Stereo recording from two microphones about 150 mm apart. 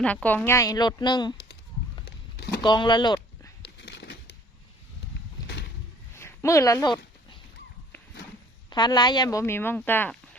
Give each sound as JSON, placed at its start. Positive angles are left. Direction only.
{"t": 0.0, "sound": "speech", "side_deg": 10}
{"t": 2.6, "sound": "speech", "side_deg": 30}
{"t": 6.1, "sound": "a sound", "side_deg": 20}
{"t": 8.7, "sound": "a woman's voice", "side_deg": 30}